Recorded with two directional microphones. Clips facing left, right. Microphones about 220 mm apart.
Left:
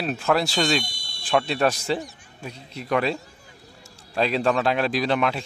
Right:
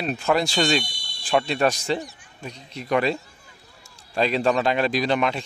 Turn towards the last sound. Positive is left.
turn(degrees=0)  # may be behind; listen again after turning